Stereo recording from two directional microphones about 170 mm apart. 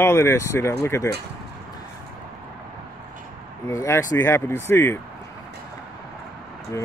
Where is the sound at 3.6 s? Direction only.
15° left (ahead or behind).